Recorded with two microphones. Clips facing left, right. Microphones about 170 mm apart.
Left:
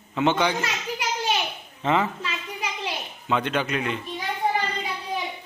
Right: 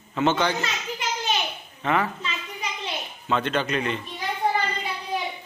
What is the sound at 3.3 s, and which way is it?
Mantra, 10° left (ahead or behind).